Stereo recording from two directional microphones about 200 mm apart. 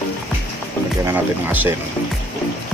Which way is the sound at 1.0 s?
10° right (ahead or behind).